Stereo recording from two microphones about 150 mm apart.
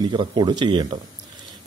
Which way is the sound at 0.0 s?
30° right (ahead or behind).